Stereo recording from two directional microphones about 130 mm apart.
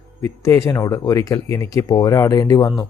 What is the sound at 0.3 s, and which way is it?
Speech, 25° left (ahead or behind).